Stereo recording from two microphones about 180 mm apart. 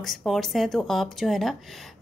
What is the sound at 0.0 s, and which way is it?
Speech, centre (ahead or behind).